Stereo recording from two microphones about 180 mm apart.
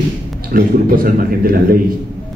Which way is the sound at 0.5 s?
55° right (ahead or behind).